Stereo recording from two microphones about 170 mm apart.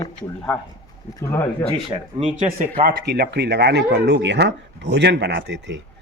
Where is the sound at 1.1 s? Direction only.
15° left (ahead or behind).